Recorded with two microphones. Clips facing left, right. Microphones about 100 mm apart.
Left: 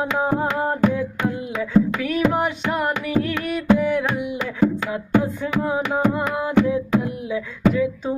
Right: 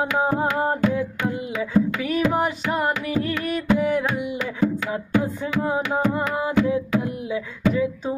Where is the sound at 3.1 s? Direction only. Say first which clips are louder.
Left 2 dB; 65° left (ahead or behind).